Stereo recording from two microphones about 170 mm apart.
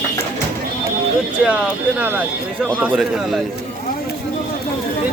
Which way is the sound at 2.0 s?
10° right (ahead or behind).